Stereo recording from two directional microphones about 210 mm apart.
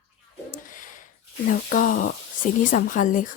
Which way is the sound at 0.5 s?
40° left (ahead or behind).